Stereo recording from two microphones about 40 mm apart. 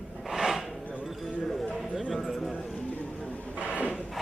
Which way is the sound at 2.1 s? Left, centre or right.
Centre.